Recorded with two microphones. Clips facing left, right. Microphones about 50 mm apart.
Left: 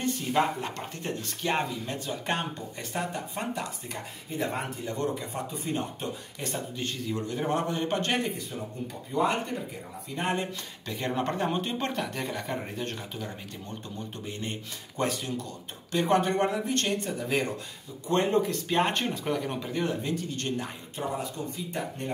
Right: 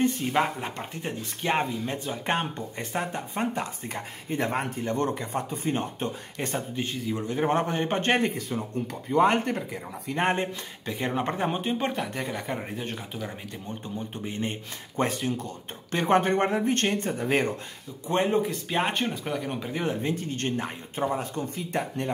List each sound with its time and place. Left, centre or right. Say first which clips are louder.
0.0 s speech: right 2 dB; right
1.5 s speech: right 3 dB; right
4.3 s speech: right 4 dB; right
6.8 s speech: right 1 dB; centre
7.4 s speech: right 4 dB; right
10.9 s speech: right 2 dB; centre; by 17.5 s right
18.0 s speech: right 1 dB; centre
19.6 s speech: right 1 dB; centre; by 21.3 s right
21.5 s speech: right 4 dB; right